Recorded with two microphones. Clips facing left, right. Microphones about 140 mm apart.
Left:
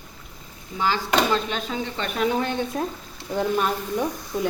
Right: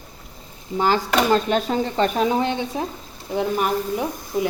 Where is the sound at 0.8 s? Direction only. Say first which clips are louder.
Right 3 dB; 45° right (ahead or behind).